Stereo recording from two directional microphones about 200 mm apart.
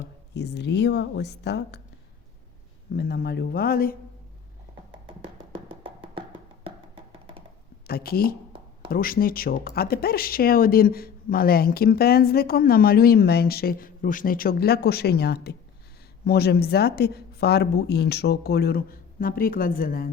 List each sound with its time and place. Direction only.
0.3 s a woman's voice: 55° left (ahead or behind)
2.9 s speech: 50° left (ahead or behind)
5.8 s music: 25° right (ahead or behind)
7.9 s speech: 50° left (ahead or behind)